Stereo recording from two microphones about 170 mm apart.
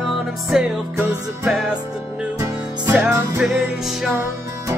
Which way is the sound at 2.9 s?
10° right (ahead or behind).